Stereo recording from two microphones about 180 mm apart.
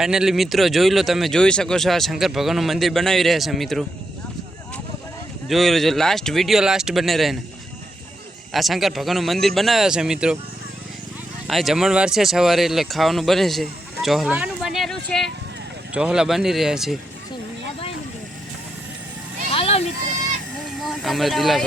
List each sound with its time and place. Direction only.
0.0 s speech: 5° right (ahead or behind)
5.5 s speech: centre (ahead or behind)
8.5 s speech: centre (ahead or behind)
11.4 s speech: centre (ahead or behind)
19.5 s sheep: 35° left (ahead or behind)
20.7 s speech: centre (ahead or behind)